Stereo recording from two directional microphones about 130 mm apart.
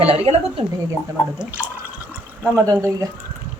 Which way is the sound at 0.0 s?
50° right (ahead or behind).